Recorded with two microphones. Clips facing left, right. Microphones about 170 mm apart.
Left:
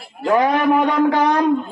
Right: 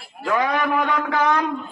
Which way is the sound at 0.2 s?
30° left (ahead or behind).